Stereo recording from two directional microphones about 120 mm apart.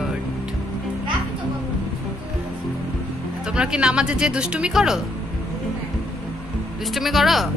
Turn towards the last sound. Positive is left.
turn(degrees=0)  # may be behind; listen again after turning